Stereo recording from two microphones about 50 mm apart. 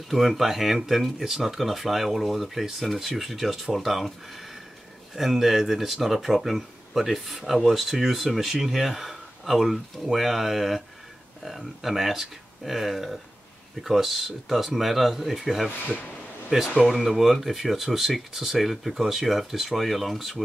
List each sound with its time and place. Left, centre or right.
0.1 s speech: centre
16.5 s speech: centre
16.9 s speech: centre